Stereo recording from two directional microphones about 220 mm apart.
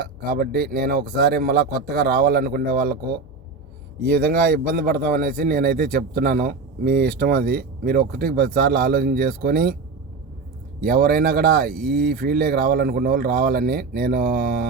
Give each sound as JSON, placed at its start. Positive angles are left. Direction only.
{"t": 0.0, "sound": "speech", "side_deg": -45}
{"t": 4.3, "sound": "speech", "side_deg": -40}
{"t": 10.8, "sound": "speech", "side_deg": -40}
{"t": 11.7, "sound": "speech", "side_deg": 0}
{"t": 11.9, "sound": "speech", "side_deg": -45}